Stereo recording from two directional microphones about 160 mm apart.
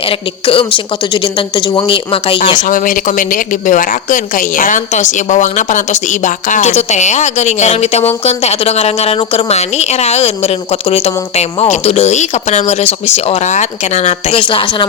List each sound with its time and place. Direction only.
0.0 s a woman's voice: 35° left (ahead or behind)
2.6 s speech: 55° left (ahead or behind); by 14.8 s 30° left (ahead or behind)